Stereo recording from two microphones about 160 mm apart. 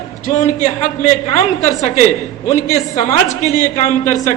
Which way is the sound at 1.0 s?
45° left (ahead or behind).